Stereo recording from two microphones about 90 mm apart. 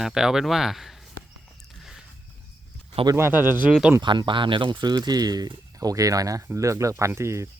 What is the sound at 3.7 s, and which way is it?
Speech, 5° right (ahead or behind).